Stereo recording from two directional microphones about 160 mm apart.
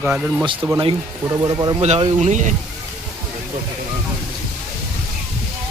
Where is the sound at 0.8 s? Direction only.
25° right (ahead or behind).